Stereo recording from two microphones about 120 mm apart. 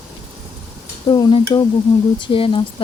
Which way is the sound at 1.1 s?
35° left (ahead or behind).